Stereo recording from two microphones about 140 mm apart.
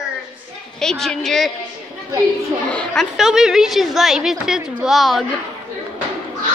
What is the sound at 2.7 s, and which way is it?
Speech, 5° left (ahead or behind).